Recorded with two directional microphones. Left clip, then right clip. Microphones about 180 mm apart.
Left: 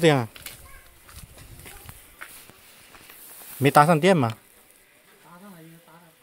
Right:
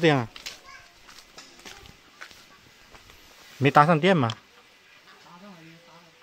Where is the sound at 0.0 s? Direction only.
20° left (ahead or behind).